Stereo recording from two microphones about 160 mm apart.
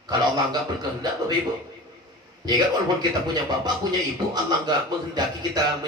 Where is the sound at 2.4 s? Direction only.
25° right (ahead or behind).